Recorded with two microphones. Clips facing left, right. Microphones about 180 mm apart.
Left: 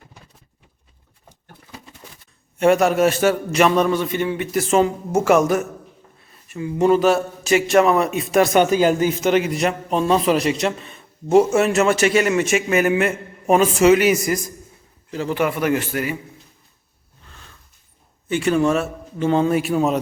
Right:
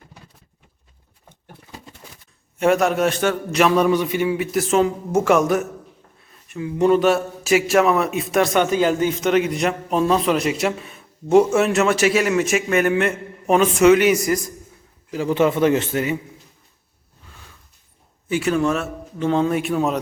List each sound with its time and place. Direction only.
2.6 s a man's voice: centre (ahead or behind)
15.1 s a man's voice: 15° right (ahead or behind)
17.2 s a sound: 10° right (ahead or behind)
18.3 s a man's voice: 5° right (ahead or behind)